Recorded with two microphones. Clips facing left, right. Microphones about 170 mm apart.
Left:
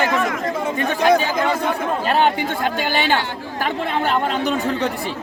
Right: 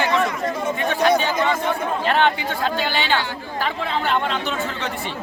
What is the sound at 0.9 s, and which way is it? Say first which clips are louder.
Chatter: left 2 dB; 40° left (ahead or behind).